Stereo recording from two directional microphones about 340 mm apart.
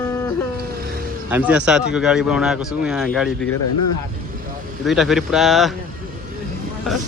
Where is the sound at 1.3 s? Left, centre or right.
Centre.